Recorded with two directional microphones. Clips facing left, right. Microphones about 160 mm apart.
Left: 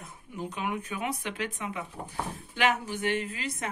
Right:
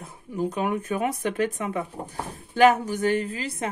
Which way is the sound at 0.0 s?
40° right (ahead or behind).